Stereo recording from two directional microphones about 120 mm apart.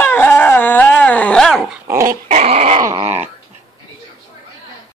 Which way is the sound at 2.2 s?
70° right (ahead or behind).